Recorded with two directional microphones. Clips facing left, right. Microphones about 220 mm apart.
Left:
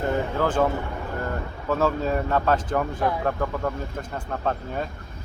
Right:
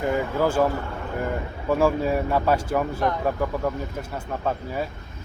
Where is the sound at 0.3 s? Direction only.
10° right (ahead or behind).